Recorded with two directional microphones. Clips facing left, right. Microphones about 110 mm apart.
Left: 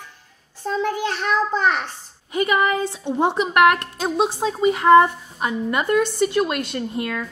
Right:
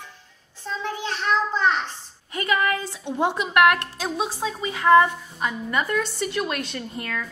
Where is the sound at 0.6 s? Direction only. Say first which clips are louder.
Left 7 dB; 50° left (ahead or behind).